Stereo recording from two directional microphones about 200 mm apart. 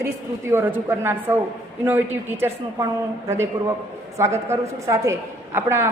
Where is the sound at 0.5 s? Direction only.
10° right (ahead or behind).